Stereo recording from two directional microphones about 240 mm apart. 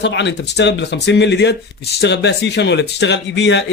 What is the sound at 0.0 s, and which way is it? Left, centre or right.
Speech, left.